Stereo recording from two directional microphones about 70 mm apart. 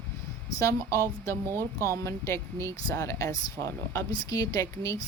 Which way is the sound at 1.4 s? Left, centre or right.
Right.